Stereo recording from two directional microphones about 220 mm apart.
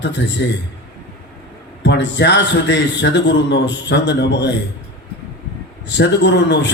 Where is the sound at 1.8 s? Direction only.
50° left (ahead or behind).